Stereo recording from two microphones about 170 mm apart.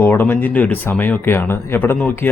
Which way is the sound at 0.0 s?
15° left (ahead or behind).